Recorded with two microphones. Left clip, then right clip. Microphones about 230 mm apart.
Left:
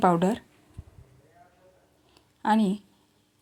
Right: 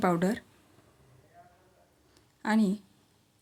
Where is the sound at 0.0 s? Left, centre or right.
Centre.